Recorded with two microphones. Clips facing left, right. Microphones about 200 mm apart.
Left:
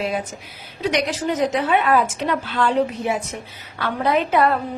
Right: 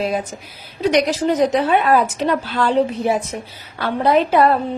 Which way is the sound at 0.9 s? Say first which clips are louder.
Right 5 dB; 35° right (ahead or behind).